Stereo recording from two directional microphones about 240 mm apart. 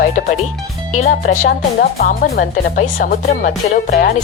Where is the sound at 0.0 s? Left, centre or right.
Left.